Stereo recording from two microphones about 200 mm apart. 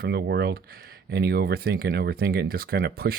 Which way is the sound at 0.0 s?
55° right (ahead or behind).